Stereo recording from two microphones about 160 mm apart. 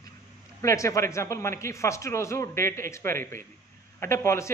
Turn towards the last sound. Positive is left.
turn(degrees=15)  # may be behind; listen again after turning